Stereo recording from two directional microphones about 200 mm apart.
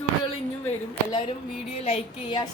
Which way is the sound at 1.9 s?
25° left (ahead or behind).